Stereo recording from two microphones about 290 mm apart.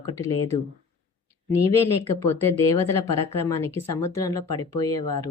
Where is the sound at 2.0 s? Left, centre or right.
Centre.